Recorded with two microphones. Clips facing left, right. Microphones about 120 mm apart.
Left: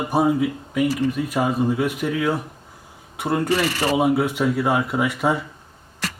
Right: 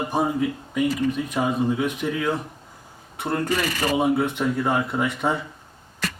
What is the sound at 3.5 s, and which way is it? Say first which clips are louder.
Speech: left 3 dB; 35° left (ahead or behind).